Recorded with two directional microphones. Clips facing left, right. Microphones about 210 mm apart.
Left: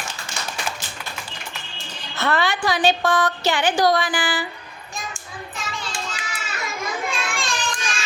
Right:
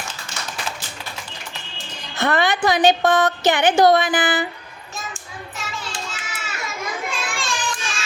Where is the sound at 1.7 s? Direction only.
15° right (ahead or behind).